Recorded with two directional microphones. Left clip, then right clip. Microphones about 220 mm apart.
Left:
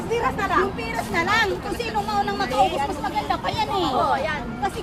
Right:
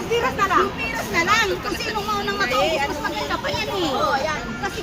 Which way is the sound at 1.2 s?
35° left (ahead or behind).